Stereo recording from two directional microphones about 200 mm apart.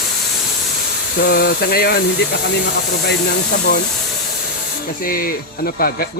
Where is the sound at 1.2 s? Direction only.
50° left (ahead or behind).